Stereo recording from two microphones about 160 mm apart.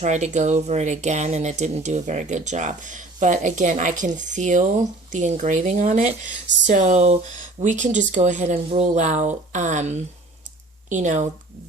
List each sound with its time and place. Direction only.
0.0 s speech: 45° right (ahead or behind)